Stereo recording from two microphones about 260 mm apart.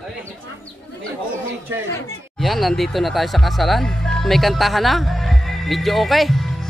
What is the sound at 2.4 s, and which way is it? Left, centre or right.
Speech, centre.